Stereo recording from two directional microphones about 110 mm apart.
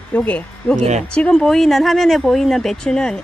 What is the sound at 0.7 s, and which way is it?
Speech, 90° right.